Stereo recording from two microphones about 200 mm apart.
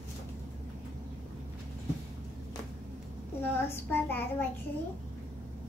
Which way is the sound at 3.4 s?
10° left (ahead or behind).